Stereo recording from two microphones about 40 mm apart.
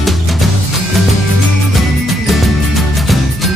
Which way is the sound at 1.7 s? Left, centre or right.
Centre.